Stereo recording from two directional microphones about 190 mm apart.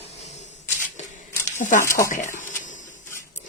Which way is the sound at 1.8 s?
15° left (ahead or behind).